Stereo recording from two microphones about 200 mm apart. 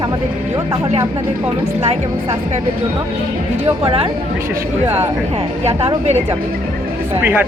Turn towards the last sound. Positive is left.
turn(degrees=-10)  # may be behind; listen again after turning